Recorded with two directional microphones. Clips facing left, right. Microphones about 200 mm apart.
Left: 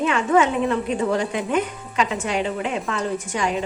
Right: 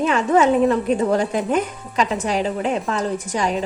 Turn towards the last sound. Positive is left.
turn(degrees=-35)  # may be behind; listen again after turning